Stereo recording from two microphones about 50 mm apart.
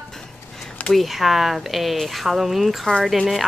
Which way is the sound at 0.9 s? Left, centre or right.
Centre.